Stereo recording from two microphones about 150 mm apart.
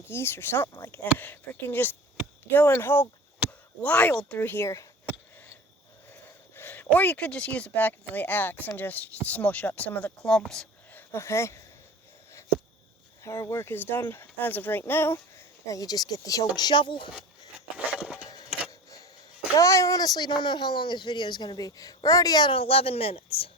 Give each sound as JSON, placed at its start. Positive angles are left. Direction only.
{"t": 0.1, "sound": "speech", "side_deg": 15}
{"t": 3.4, "sound": "a sound", "side_deg": -10}
{"t": 3.8, "sound": "speech", "side_deg": 10}
{"t": 6.6, "sound": "speech", "side_deg": 15}
{"t": 11.1, "sound": "speech", "side_deg": 20}
{"t": 13.2, "sound": "speech", "side_deg": 20}
{"t": 17.7, "sound": "a sound", "side_deg": -5}
{"t": 18.3, "sound": "tick-tock", "side_deg": 25}
{"t": 19.5, "sound": "speech", "side_deg": 20}